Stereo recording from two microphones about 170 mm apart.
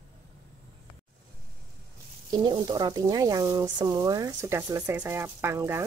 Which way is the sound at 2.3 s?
25° right (ahead or behind).